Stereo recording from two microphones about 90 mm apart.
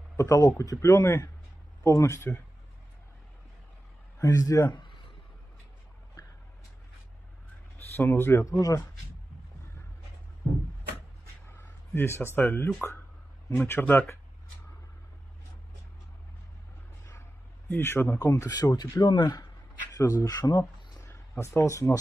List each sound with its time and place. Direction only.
0.2 s speech: 35° left (ahead or behind)
4.2 s speech: 40° left (ahead or behind)
7.9 s speech: 25° left (ahead or behind)
8.5 s speech: 40° left (ahead or behind)
11.4 s a sound: 25° left (ahead or behind)
12.4 s speech: 25° left (ahead or behind)
13.7 s speech: 25° left (ahead or behind)
17.6 s speech: 25° left (ahead or behind); by 19.4 s 50° left (ahead or behind)
19.9 s a sound: 35° left (ahead or behind)
20.2 s speech: 45° left (ahead or behind)
21.1 s speech: 30° left (ahead or behind)